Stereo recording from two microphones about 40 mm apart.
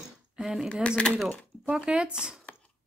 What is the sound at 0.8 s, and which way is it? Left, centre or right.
Speech, left.